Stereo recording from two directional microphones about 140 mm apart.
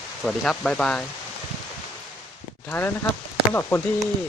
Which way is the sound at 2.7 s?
15° left (ahead or behind).